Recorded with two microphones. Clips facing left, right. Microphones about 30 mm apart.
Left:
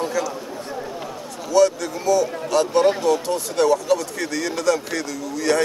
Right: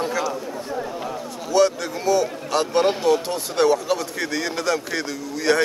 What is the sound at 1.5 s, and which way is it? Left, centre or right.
Speech, right.